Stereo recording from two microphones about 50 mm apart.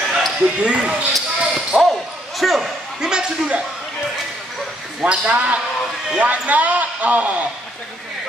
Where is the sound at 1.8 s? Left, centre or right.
Centre.